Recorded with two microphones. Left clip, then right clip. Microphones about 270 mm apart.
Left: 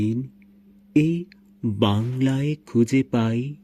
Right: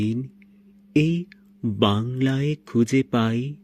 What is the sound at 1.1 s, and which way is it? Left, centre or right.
Speech, right.